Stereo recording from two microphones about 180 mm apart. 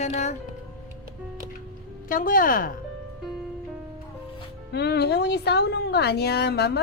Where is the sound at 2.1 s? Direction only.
50° left (ahead or behind).